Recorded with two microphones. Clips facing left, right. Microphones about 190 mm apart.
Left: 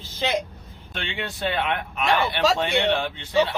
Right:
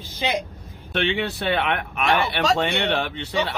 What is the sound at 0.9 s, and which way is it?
Speech, 65° right (ahead or behind).